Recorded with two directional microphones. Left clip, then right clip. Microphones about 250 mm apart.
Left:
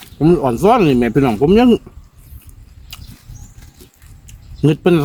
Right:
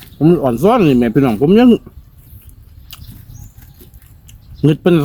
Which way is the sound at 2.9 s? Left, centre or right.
Centre.